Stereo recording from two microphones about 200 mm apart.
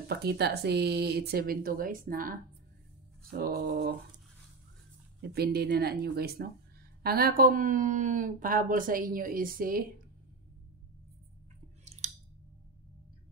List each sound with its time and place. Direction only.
0.1 s speech: 55° right (ahead or behind)
5.2 s speech: 55° right (ahead or behind)
12.0 s a sound: 35° right (ahead or behind)